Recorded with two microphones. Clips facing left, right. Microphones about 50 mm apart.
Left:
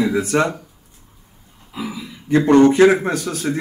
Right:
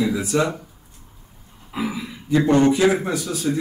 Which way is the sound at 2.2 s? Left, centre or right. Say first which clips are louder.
Left 4 dB; left.